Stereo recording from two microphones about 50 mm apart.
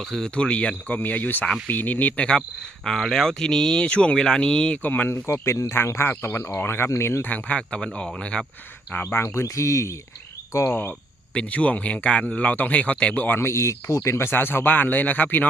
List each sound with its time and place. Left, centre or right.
0.0 s speech: centre
0.3 s speech: left
2.8 s speech: centre
4.8 s speech: left
5.0 s speech: left
6.1 s speech: left
7.2 s speech: left; by 8.4 s centre
8.9 s speech: left
9.3 s speech: left
11.3 s speech: left
13.2 s speech: left
13.5 s speech: left
14.3 s speech: left